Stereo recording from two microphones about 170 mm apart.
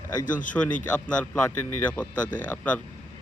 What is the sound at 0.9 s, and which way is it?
A man's voice, 5° left (ahead or behind).